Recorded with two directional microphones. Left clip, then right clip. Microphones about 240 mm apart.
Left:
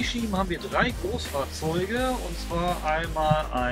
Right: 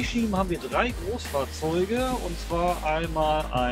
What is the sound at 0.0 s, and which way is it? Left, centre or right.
Speech, centre.